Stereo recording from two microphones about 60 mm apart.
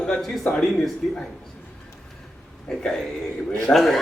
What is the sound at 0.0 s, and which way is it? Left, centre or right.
A man's voice, centre.